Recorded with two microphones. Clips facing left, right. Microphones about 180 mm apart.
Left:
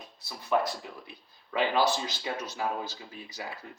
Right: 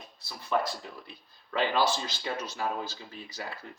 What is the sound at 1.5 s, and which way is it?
Speech, 15° left (ahead or behind).